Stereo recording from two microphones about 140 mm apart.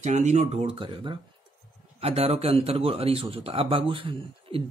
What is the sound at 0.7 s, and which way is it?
Speech, 35° right (ahead or behind).